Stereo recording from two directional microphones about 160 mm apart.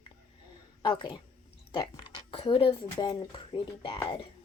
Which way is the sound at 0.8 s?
30° left (ahead or behind).